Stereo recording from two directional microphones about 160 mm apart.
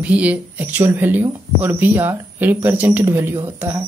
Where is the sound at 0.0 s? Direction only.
10° right (ahead or behind).